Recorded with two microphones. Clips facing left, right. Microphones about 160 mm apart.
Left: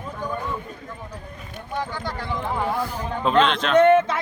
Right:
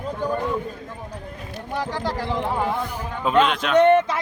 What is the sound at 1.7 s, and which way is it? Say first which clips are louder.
Speech: right 3 dB; 80° right.